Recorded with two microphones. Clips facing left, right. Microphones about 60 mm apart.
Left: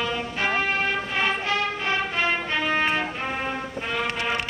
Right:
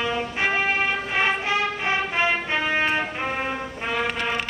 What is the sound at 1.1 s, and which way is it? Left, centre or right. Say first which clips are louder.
Music: right 2 dB; right.